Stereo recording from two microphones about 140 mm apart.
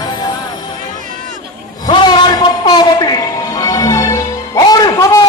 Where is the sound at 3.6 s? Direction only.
25° left (ahead or behind).